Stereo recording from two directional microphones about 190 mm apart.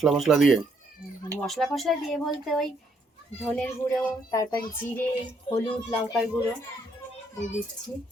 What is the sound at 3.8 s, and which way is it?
Speech, 15° left (ahead or behind).